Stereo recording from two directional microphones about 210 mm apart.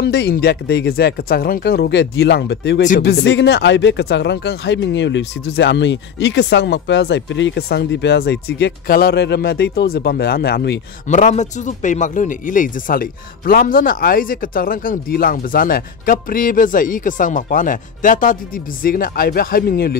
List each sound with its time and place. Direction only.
0.0 s speech: 50° left (ahead or behind)
11.1 s speech: 35° left (ahead or behind)